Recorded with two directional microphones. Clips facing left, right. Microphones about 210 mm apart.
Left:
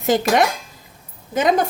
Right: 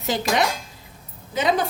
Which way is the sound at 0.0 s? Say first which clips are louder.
Left 6 dB; 50° left (ahead or behind).